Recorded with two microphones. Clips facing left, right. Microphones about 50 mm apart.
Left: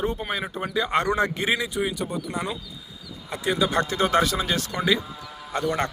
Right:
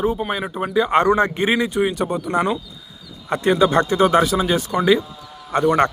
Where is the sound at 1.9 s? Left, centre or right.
Right.